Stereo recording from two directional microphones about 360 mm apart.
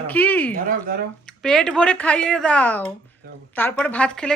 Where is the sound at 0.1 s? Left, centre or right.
Centre.